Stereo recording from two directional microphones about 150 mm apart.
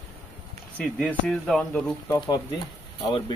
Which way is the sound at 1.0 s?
5° left (ahead or behind).